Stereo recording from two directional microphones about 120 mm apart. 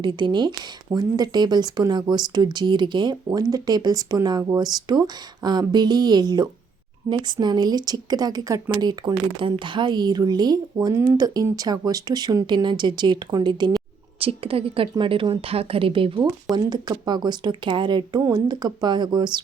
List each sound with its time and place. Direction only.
0.0 s speech: 40° right (ahead or behind)
14.3 s speech: 50° right (ahead or behind)
16.6 s speech: 35° right (ahead or behind)